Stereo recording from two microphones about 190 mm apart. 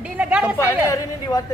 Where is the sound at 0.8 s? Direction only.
15° left (ahead or behind).